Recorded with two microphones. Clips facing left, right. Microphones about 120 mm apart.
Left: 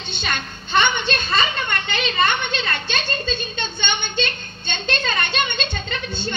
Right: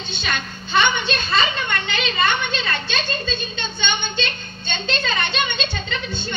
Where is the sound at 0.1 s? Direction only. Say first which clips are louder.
Even; 55° left (ahead or behind).